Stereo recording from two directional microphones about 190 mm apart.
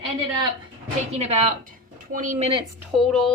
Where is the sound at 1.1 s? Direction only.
35° right (ahead or behind).